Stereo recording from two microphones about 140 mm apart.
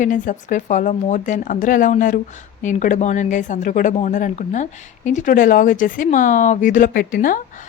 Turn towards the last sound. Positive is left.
turn(degrees=80)